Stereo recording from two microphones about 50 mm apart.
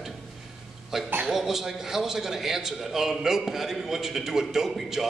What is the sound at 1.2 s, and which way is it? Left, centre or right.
A man's voice, centre.